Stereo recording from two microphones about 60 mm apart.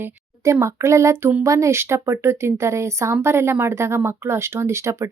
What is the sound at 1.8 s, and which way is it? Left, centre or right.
Speech, right.